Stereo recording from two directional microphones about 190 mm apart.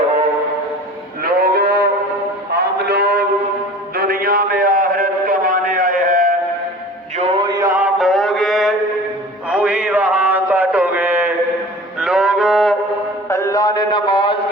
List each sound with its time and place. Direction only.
1.2 s cattle: 50° right (ahead or behind)
2.5 s a sound: 60° right (ahead or behind)
7.2 s mantra: 30° right (ahead or behind); by 8.7 s centre (ahead or behind)
9.5 s a sound: 5° right (ahead or behind)
11.9 s music: 5° right (ahead or behind)
13.2 s mantra: 15° left (ahead or behind)